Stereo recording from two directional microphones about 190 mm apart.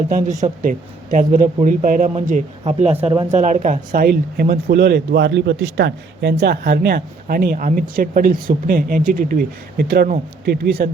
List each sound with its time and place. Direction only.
0.1 s speech: 40° right (ahead or behind)
3.3 s speech: 40° right (ahead or behind); by 10.8 s 55° right (ahead or behind)